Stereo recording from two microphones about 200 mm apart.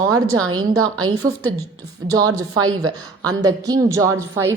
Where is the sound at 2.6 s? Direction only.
90° right.